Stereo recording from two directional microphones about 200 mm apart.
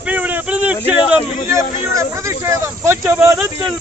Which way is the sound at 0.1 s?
10° right (ahead or behind).